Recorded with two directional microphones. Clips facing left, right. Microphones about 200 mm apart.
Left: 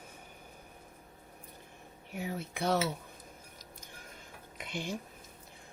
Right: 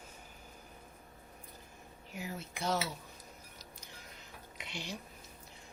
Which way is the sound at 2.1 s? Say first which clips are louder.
Left 5 dB; 60° left (ahead or behind).